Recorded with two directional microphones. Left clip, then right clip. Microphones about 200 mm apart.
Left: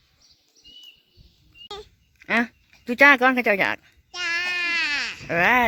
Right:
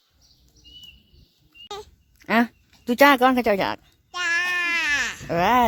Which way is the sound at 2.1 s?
15° right (ahead or behind).